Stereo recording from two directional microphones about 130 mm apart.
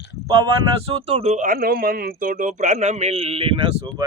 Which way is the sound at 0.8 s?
50° right (ahead or behind).